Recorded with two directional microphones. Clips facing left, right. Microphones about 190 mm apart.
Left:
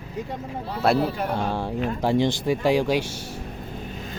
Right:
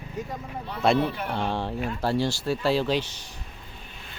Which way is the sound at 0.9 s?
40° left (ahead or behind).